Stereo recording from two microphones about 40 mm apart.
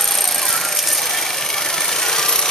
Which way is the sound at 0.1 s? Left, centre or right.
Centre.